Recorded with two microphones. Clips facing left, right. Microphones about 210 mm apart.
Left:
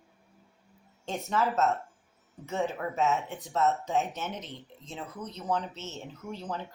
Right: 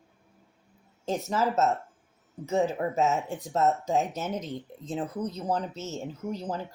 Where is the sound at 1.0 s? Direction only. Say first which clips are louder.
Right 2 dB; 40° right (ahead or behind).